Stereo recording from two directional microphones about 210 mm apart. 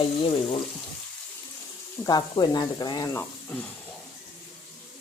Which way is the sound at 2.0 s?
20° left (ahead or behind).